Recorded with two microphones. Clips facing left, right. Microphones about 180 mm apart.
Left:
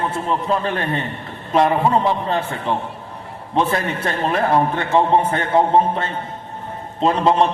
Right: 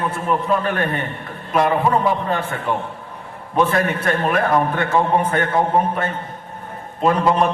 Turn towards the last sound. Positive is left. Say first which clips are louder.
# left 1 dB
turn(degrees=25)  # may be behind; listen again after turning